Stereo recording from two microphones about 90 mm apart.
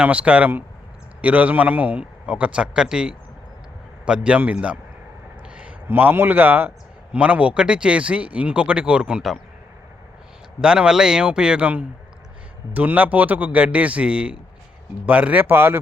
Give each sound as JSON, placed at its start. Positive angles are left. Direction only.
{"t": 0.0, "sound": "a man's voice", "side_deg": -15}
{"t": 10.6, "sound": "a man's voice", "side_deg": -10}